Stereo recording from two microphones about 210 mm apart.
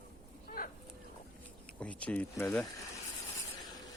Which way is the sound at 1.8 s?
5° left (ahead or behind).